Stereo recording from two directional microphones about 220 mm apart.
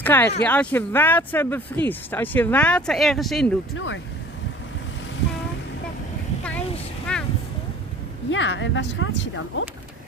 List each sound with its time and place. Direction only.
0.0 s speech: 10° left (ahead or behind)
3.7 s speech: 60° left (ahead or behind)
7.1 s vehicle: 5° left (ahead or behind)
8.3 s speech: 55° left (ahead or behind)